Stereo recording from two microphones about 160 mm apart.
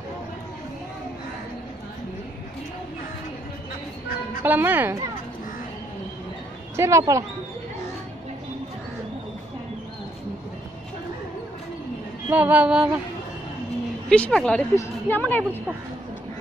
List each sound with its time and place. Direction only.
4.4 s music: 10° right (ahead or behind)
6.8 s speech: 20° right (ahead or behind)
12.3 s music: 10° right (ahead or behind)
14.0 s a woman's voice: 5° left (ahead or behind)